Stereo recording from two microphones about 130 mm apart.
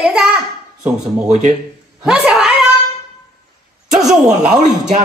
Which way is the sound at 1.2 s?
65° right (ahead or behind).